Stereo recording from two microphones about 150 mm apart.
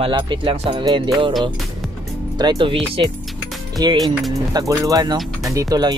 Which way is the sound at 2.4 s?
30° right (ahead or behind).